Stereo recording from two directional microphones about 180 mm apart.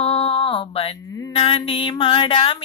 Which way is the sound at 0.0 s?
30° left (ahead or behind).